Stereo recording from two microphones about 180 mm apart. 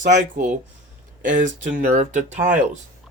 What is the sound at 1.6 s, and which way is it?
Speech, 45° right (ahead or behind).